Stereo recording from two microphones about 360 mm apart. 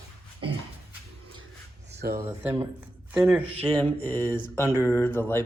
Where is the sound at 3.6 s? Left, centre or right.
Centre.